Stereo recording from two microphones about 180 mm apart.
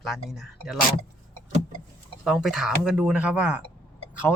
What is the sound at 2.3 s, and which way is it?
Speech, centre (ahead or behind).